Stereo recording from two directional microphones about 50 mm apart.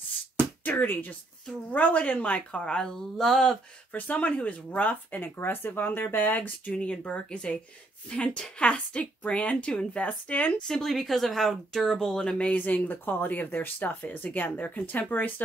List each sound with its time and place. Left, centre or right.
0.7 s a woman's voice: left
2.6 s speech: centre
3.9 s speech: left
6.8 s a woman's voice: left
10.6 s speech: centre
12.5 s speech: left